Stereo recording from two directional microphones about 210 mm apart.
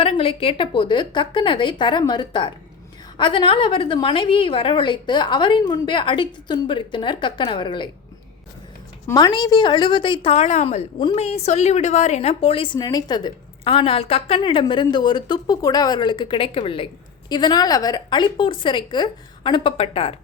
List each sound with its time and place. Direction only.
0.0 s a woman's voice: 25° left (ahead or behind)
9.0 s a woman's voice: 20° left (ahead or behind)